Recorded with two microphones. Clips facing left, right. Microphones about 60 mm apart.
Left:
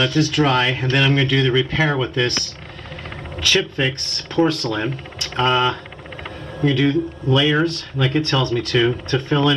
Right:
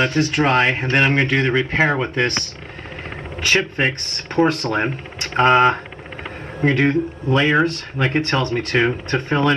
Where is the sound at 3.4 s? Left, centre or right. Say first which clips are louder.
Right 1 dB; right.